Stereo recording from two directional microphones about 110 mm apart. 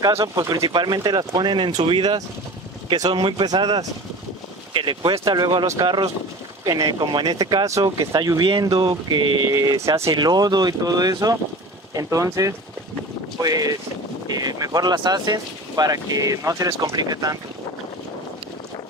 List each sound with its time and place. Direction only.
0.2 s speech: 35° right (ahead or behind)